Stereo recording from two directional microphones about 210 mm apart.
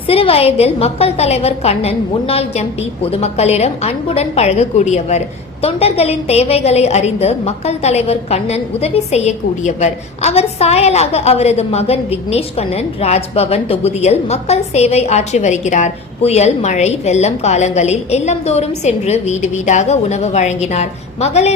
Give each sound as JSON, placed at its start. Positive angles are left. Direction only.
{"t": 0.1, "sound": "a woman's voice", "side_deg": 25}